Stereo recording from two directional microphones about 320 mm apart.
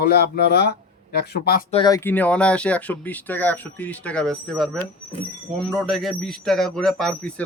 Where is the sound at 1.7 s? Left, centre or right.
Centre.